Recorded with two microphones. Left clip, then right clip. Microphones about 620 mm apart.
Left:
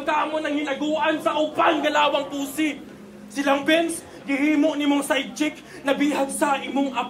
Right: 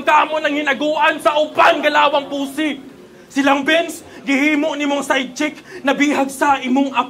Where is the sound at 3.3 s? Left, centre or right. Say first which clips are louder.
Right 5 dB; right.